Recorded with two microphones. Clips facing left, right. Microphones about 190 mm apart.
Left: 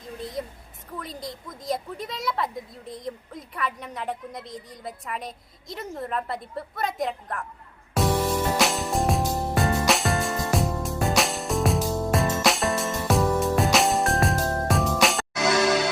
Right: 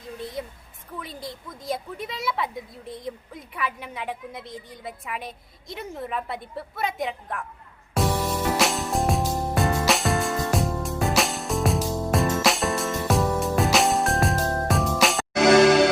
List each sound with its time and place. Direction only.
0.9 s a woman's voice: centre (ahead or behind)
7.9 s music: centre (ahead or behind)
15.4 s music: 55° right (ahead or behind)